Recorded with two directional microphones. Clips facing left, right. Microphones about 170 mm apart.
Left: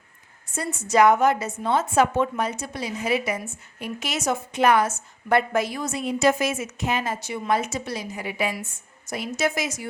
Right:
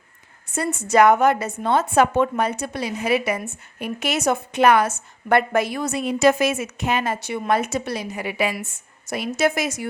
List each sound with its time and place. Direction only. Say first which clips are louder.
0.5 s a woman's voice: right 3 dB; 65° right (ahead or behind)